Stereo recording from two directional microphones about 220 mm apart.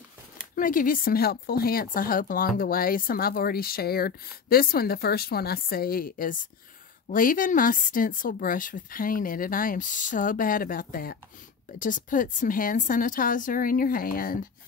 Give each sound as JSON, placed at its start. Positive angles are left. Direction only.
{"t": 0.6, "sound": "a woman's voice", "side_deg": 40}